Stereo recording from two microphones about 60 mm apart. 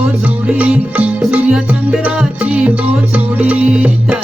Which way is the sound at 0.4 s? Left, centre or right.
Centre.